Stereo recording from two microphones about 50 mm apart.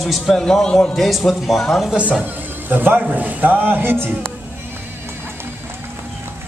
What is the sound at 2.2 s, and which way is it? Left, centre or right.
Speech, right.